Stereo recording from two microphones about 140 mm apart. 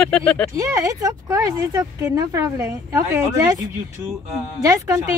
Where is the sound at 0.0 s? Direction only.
5° left (ahead or behind).